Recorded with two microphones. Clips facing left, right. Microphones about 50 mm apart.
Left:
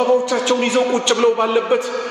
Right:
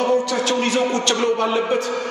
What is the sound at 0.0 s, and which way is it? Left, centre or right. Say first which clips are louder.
A man's voice: left 3 dB; left.